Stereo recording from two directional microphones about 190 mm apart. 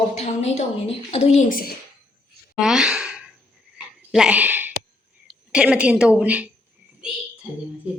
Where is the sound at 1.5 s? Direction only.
50° left (ahead or behind).